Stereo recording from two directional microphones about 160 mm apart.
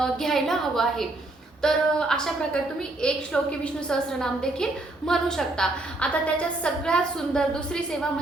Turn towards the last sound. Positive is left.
turn(degrees=5)  # may be behind; listen again after turning